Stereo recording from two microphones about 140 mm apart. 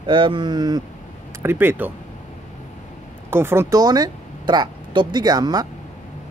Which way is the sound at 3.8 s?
30° right (ahead or behind).